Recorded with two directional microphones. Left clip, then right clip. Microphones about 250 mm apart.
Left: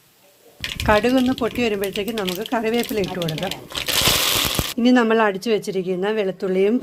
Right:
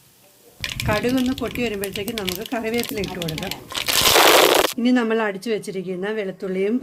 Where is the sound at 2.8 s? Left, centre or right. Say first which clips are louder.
Left 3 dB; centre.